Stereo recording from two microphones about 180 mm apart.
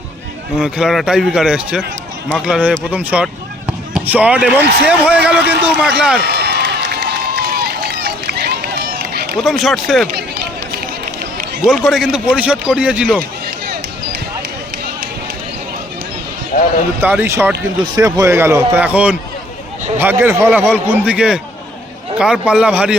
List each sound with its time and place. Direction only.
0.5 s a man's voice: 5° right (ahead or behind)
6.1 s run: 65° right (ahead or behind)
9.4 s a man's voice: centre (ahead or behind)
10.2 s run: 60° right (ahead or behind)
11.6 s a man's voice: centre (ahead or behind)
16.5 s a sound: 55° left (ahead or behind)
17.0 s a man's voice: 10° right (ahead or behind)